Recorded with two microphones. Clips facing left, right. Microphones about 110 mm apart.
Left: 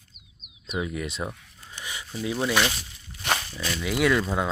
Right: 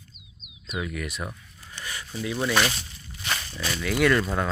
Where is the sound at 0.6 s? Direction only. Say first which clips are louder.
Left 2 dB; 25° left (ahead or behind).